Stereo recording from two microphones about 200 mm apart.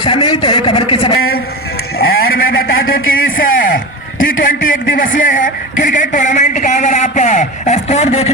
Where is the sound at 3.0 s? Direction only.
90° left.